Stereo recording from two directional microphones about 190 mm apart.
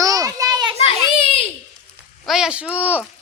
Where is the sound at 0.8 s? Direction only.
30° left (ahead or behind).